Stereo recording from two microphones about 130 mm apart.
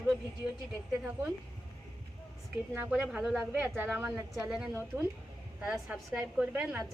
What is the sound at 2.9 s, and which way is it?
Speech, 5° right (ahead or behind).